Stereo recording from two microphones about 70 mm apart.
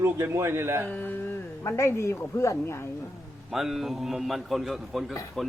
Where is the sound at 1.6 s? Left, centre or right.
Left.